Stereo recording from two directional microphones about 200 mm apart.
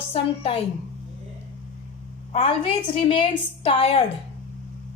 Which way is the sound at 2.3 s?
25° left (ahead or behind).